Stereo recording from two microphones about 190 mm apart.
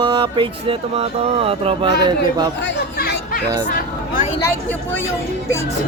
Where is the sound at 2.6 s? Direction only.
55° left (ahead or behind).